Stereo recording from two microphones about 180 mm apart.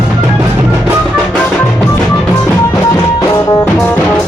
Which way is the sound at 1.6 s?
10° left (ahead or behind).